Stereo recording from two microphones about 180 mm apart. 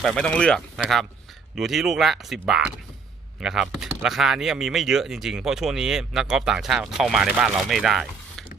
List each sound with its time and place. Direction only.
0.0 s speech: 5° left (ahead or behind)